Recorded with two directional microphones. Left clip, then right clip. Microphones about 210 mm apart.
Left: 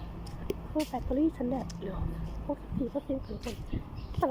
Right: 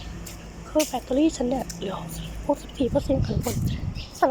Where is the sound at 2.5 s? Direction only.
15° right (ahead or behind).